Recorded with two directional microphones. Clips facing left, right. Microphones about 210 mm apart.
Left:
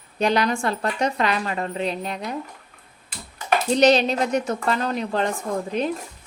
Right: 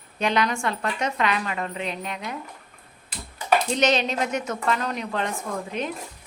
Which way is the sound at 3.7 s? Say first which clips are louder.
Left 5 dB; 35° left (ahead or behind).